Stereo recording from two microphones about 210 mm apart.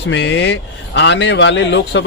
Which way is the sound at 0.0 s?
55° left (ahead or behind).